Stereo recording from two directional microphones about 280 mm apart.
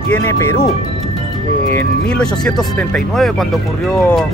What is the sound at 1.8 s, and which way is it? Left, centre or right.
Speech, centre.